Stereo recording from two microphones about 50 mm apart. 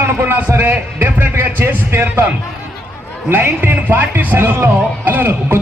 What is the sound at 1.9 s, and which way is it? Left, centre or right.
Speech, right.